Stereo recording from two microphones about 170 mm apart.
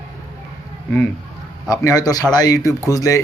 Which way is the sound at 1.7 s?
20° left (ahead or behind).